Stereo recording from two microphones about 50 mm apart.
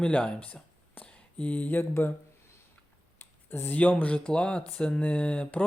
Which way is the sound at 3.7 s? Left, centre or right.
Left.